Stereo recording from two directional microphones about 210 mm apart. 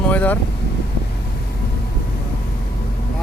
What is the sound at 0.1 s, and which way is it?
Vehicle, 5° left (ahead or behind).